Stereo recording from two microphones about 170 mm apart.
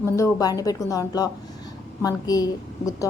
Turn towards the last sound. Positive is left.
turn(degrees=20)  # may be behind; listen again after turning